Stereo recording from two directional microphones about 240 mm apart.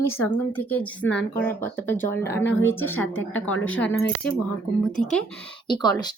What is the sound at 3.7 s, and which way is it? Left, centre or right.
Speech, left.